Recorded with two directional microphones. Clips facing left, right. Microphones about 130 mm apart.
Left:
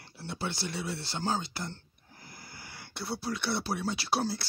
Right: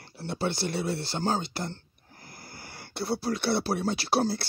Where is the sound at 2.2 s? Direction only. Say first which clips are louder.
Right 3 dB; 40° right (ahead or behind).